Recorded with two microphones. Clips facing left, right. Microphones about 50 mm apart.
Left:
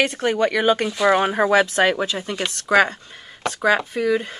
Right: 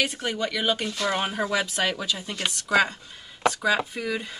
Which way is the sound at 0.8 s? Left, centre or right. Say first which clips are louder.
Left 9 dB; centre.